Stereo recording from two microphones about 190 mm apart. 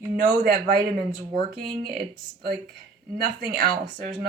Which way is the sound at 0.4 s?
45° right (ahead or behind).